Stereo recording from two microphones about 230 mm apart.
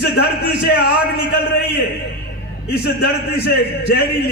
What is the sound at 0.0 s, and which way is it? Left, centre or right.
Speech, left.